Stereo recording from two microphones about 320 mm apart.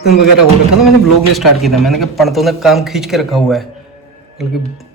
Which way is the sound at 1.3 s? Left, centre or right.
Centre.